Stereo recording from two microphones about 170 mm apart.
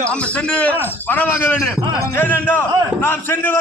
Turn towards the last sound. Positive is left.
turn(degrees=10)  # may be behind; listen again after turning